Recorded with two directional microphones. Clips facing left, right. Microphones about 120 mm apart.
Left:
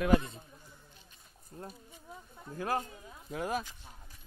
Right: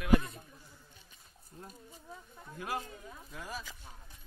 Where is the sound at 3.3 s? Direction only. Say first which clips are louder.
Left 10 dB; 60° left (ahead or behind).